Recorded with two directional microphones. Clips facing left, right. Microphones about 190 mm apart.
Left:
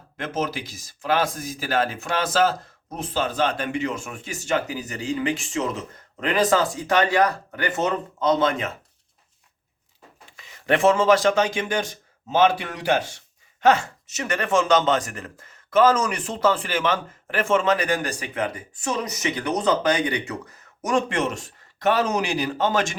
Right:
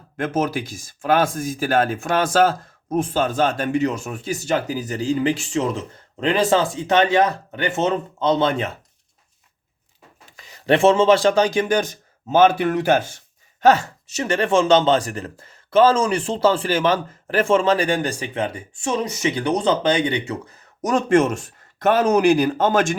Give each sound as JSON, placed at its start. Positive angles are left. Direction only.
{"t": 0.2, "sound": "speech", "side_deg": -50}
{"t": 10.3, "sound": "speech", "side_deg": -35}
{"t": 13.6, "sound": "speech", "side_deg": -35}
{"t": 20.8, "sound": "speech", "side_deg": -45}